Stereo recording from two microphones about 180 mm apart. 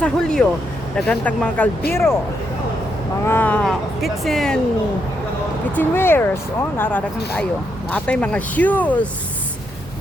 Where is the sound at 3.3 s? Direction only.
10° left (ahead or behind).